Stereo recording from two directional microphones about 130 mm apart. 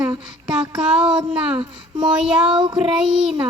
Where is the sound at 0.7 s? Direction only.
5° right (ahead or behind).